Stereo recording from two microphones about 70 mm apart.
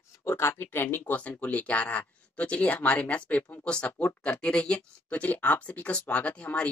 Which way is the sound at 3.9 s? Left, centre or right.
Left.